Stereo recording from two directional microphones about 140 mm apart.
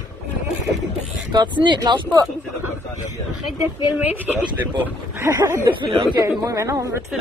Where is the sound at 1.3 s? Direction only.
35° right (ahead or behind).